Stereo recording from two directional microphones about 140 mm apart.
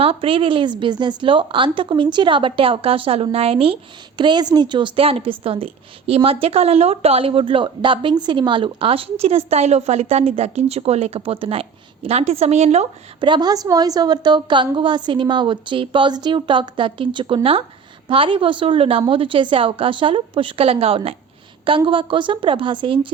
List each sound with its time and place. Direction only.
0.0 s a woman's voice: 40° right (ahead or behind)
13.1 s a woman's voice: 35° right (ahead or behind)